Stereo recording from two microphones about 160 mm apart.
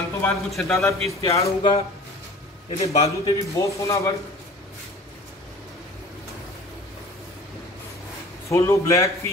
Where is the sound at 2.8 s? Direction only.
40° left (ahead or behind).